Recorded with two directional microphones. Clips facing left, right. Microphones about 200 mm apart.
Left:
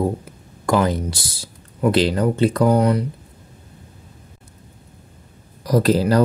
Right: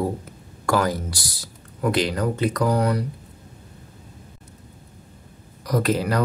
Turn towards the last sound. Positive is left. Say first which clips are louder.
# left 6 dB
turn(degrees=30)  # may be behind; listen again after turning